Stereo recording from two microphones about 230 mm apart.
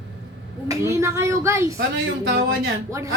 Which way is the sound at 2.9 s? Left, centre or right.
Centre.